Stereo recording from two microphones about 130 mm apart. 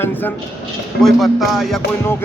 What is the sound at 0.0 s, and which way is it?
Speech, 15° left (ahead or behind).